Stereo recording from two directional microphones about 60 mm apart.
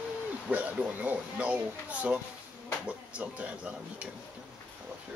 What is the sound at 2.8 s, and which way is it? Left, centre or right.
Speech, centre.